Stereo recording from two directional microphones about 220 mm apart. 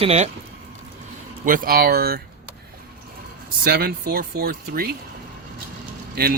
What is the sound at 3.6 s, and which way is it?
Speech, 45° right (ahead or behind).